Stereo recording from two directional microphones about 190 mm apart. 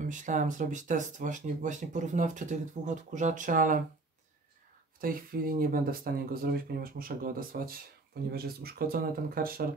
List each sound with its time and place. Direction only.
0.1 s speech: 40° right (ahead or behind)
5.0 s speech: 50° right (ahead or behind)